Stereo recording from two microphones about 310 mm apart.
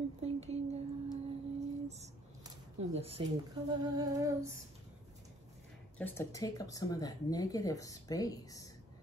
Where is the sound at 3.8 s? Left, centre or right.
Centre.